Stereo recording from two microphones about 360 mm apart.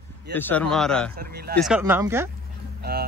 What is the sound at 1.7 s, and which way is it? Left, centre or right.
Speech, centre.